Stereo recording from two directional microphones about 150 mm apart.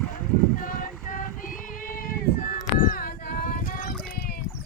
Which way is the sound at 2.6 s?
65° left (ahead or behind).